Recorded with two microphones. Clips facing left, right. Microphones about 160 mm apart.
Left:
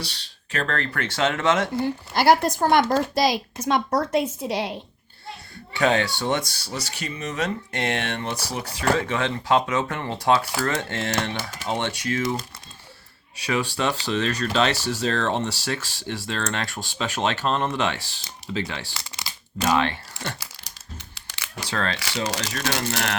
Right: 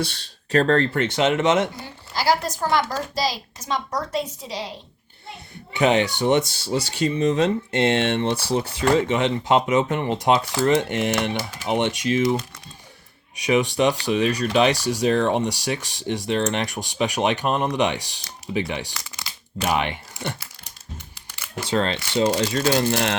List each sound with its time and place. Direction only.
0.0 s speech: 45° right (ahead or behind); by 1.7 s 20° right (ahead or behind)
1.7 s speech: 60° left (ahead or behind)
5.7 s speech: 20° right (ahead or behind)
18.9 s crumpling: 30° left (ahead or behind)
19.6 s speech: 15° right (ahead or behind)
21.2 s camera: 90° left
21.6 s speech: 25° right (ahead or behind)